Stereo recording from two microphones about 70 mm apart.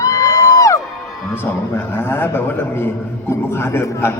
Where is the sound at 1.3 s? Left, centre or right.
Left.